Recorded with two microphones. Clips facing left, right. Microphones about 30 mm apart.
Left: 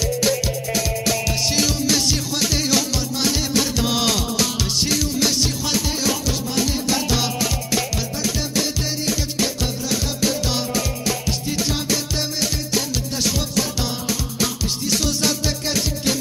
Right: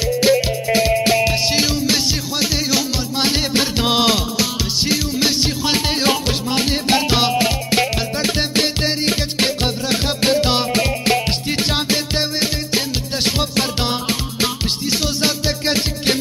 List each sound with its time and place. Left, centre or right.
0.0 s music: right
3.2 s music: right
5.8 s music: right
14.9 s music: right